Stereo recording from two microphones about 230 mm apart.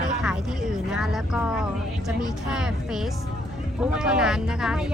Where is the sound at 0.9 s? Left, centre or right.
Centre.